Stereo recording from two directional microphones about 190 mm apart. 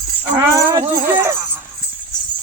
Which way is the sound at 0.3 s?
15° right (ahead or behind).